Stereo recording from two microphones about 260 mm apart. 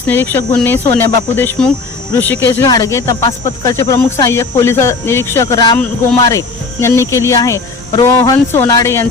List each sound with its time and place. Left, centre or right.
0.1 s speech: centre